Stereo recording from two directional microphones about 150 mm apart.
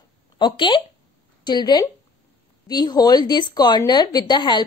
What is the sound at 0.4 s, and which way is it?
A woman's voice, 30° left (ahead or behind).